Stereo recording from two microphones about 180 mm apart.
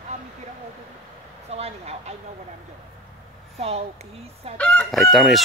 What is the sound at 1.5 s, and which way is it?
Speech, 35° right (ahead or behind).